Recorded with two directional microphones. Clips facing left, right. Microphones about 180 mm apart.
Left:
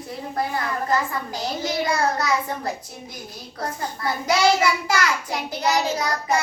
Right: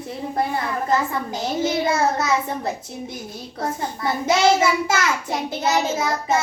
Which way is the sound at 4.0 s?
25° right (ahead or behind).